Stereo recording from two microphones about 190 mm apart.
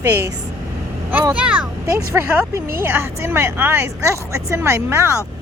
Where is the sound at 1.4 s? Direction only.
5° right (ahead or behind).